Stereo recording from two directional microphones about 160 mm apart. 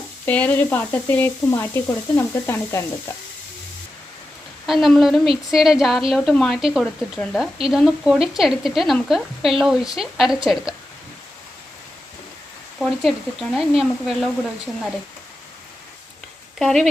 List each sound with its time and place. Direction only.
0.3 s sizzle: 10° left (ahead or behind)
4.6 s speech: centre (ahead or behind)
12.8 s speech: centre (ahead or behind)
16.6 s speech: centre (ahead or behind)